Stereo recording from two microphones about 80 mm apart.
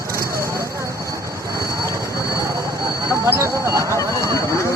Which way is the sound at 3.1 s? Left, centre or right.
Right.